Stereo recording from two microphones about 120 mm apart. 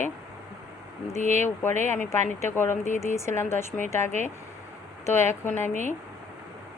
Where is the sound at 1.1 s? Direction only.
75° right (ahead or behind).